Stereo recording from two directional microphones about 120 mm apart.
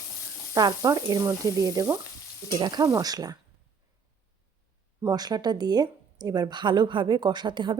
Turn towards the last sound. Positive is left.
turn(degrees=-40)  # may be behind; listen again after turning